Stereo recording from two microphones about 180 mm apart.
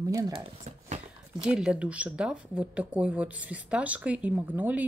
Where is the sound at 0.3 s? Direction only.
35° right (ahead or behind).